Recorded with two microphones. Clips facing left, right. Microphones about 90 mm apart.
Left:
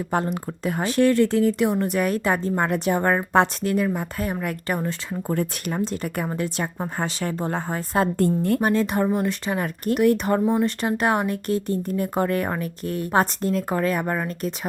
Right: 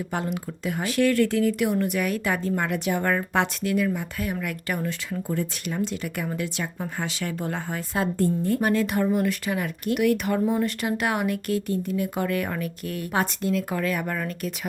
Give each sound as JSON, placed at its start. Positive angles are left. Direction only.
{"t": 0.1, "sound": "speech", "side_deg": 40}
{"t": 5.3, "sound": "speech", "side_deg": 50}
{"t": 8.4, "sound": "speech", "side_deg": 60}
{"t": 8.6, "sound": "speech", "side_deg": 25}